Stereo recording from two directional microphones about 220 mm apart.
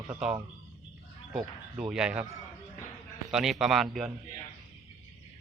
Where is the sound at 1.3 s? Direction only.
5° right (ahead or behind).